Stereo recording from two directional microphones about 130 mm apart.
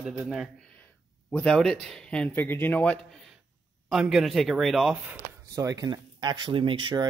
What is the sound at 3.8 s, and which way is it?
Speech, 5° right (ahead or behind).